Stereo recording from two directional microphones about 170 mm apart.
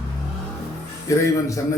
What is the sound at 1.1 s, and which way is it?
Speech, 20° left (ahead or behind).